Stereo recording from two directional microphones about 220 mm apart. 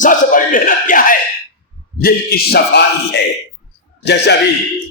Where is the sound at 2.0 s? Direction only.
45° left (ahead or behind).